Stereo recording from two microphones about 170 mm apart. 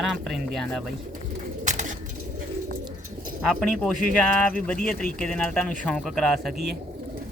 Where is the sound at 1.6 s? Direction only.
45° right (ahead or behind).